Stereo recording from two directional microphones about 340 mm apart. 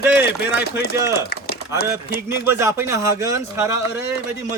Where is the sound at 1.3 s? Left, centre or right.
Left.